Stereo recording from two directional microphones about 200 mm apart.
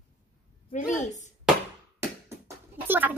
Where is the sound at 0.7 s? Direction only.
40° left (ahead or behind).